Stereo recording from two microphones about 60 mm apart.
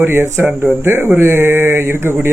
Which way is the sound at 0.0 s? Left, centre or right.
Right.